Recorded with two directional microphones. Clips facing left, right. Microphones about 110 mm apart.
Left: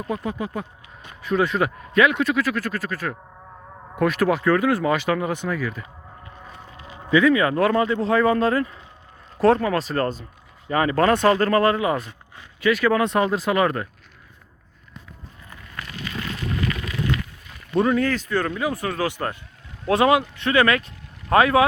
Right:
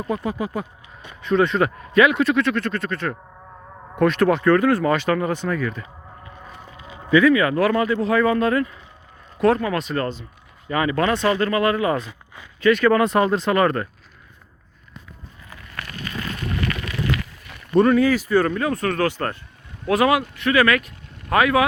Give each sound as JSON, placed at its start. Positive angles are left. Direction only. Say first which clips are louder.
{"t": 0.3, "sound": "speech", "louder": "right 2 dB", "side_deg": -5}
{"t": 1.2, "sound": "speech", "louder": "right 3 dB", "side_deg": 5}
{"t": 6.7, "sound": "a sound", "louder": "right 1 dB", "side_deg": -20}
{"t": 7.1, "sound": "speech", "louder": "right 2 dB", "side_deg": 20}
{"t": 11.7, "sound": "speech", "louder": "right 1 dB", "side_deg": 15}
{"t": 12.6, "sound": "speech", "louder": "right 3 dB", "side_deg": 5}
{"t": 15.4, "sound": "a sound", "louder": "right 1 dB", "side_deg": -80}
{"t": 15.9, "sound": "a sound", "louder": "even", "side_deg": -45}
{"t": 16.5, "sound": "a sound", "louder": "even", "side_deg": -65}
{"t": 17.7, "sound": "speech", "louder": "right 4 dB", "side_deg": 0}
{"t": 18.5, "sound": "speech", "louder": "right 3 dB", "side_deg": 10}
{"t": 19.9, "sound": "speech", "louder": "even", "side_deg": 25}